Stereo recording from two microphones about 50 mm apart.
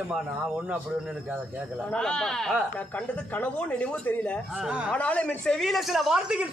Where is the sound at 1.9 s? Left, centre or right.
Centre.